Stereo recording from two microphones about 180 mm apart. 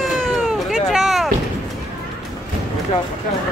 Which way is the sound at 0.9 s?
Centre (ahead or behind).